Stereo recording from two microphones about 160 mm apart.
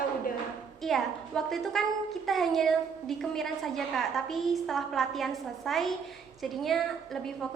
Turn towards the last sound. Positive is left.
turn(degrees=0)  # may be behind; listen again after turning